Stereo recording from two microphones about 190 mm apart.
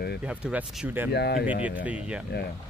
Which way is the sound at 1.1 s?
60° left (ahead or behind).